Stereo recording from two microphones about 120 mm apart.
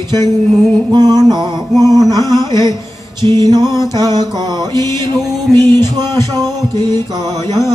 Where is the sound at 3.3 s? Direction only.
35° right (ahead or behind).